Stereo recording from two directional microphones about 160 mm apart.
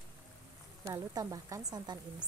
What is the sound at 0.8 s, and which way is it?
A woman's voice, 20° right (ahead or behind).